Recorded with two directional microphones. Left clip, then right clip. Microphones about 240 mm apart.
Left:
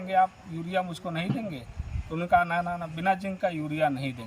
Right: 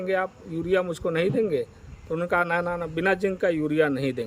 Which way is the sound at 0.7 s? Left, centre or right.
Right.